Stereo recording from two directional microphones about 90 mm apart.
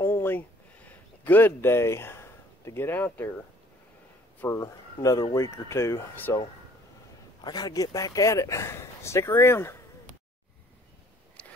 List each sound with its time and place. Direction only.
0.0 s a sound: 25° left (ahead or behind)
4.5 s speech: 35° left (ahead or behind)
7.4 s speech: 45° left (ahead or behind); by 9.8 s 25° left (ahead or behind)